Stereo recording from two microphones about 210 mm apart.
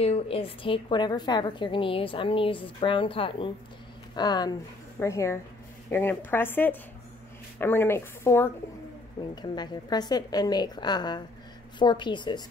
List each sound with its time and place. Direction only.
0.0 s a woman's voice: 30° left (ahead or behind)